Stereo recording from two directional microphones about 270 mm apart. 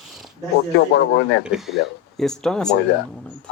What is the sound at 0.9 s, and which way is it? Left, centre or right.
Speech, left.